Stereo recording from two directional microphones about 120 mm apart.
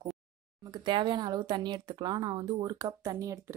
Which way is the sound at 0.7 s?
40° right (ahead or behind).